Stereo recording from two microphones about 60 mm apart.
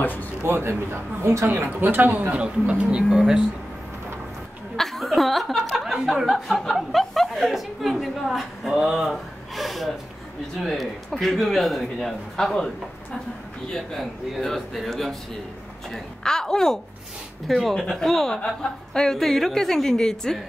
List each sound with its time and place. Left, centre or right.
0.0 s speech: left
0.4 s speech: right
1.2 s a woman's voice: right
1.7 s speech: right; by 3.4 s centre
4.7 s chuckle: centre
6.2 s a man's voice: centre